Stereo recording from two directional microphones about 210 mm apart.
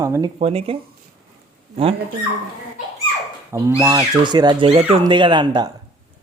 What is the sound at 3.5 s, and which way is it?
Speech, 15° right (ahead or behind).